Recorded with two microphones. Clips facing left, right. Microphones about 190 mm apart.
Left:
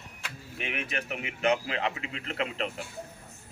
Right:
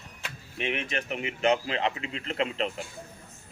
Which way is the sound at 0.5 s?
5° left (ahead or behind).